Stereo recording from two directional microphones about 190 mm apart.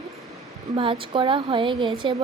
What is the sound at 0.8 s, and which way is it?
Speech, 30° right (ahead or behind).